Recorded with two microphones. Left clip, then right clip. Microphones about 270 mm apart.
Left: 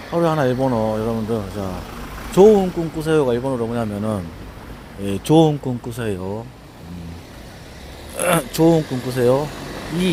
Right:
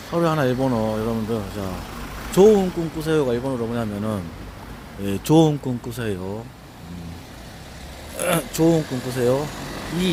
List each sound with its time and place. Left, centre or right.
0.1 s speech: centre
8.2 s speech: centre